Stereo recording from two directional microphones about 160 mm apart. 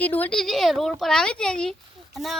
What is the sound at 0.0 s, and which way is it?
Speech, 10° left (ahead or behind).